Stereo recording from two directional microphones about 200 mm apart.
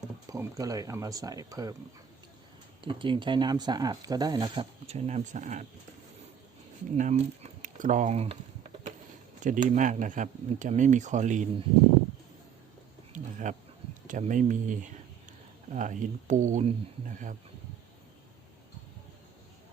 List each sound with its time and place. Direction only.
0.3 s speech: 15° right (ahead or behind)
2.8 s speech: 25° right (ahead or behind)
6.9 s speech: 35° right (ahead or behind)
13.1 s a sound: 40° right (ahead or behind)
14.1 s speech: 40° right (ahead or behind)